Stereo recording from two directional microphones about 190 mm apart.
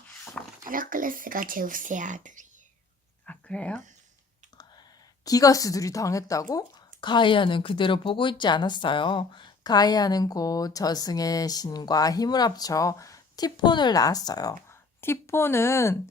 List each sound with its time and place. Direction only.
0.6 s speech: 45° right (ahead or behind)
3.2 s a sound: 5° left (ahead or behind)
5.2 s speech: 20° left (ahead or behind)